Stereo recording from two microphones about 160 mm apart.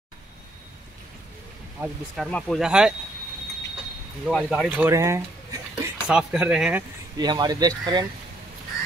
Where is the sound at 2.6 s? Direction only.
5° right (ahead or behind).